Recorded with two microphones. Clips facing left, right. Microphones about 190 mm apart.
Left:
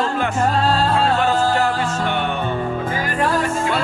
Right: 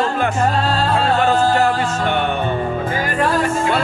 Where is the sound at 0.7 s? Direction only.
60° right (ahead or behind).